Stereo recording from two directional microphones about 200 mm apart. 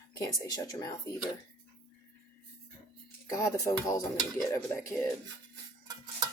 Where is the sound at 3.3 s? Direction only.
15° left (ahead or behind).